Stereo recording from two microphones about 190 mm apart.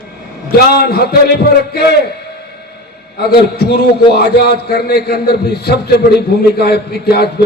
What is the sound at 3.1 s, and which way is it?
A man's voice, 55° left (ahead or behind).